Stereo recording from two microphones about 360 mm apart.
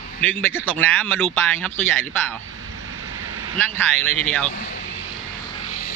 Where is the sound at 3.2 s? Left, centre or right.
Right.